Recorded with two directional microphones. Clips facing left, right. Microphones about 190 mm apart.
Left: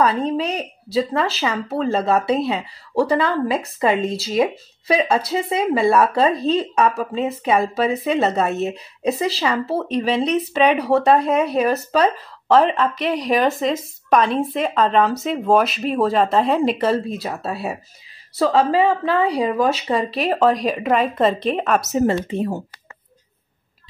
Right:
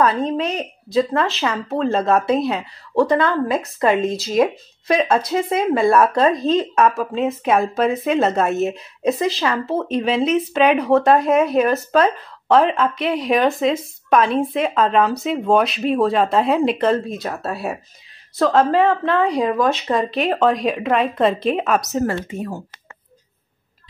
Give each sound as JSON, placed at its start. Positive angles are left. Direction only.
{"t": 0.4, "sound": "a woman's voice", "side_deg": 5}
{"t": 22.0, "sound": "speech", "side_deg": 25}